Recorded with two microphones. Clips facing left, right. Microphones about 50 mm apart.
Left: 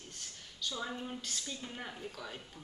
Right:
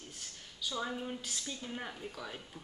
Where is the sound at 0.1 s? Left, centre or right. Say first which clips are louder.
Even; centre.